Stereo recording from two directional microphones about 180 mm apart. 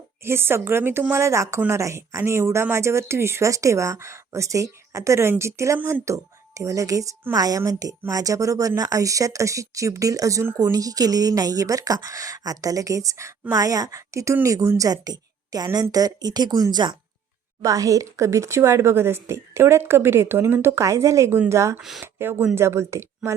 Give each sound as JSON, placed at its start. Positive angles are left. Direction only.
{"t": 0.2, "sound": "a woman's voice", "side_deg": -15}
{"t": 21.8, "sound": "speech", "side_deg": 0}
{"t": 22.0, "sound": "a woman's voice", "side_deg": -10}